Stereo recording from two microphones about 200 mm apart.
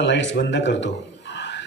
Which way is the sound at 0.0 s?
65° left (ahead or behind).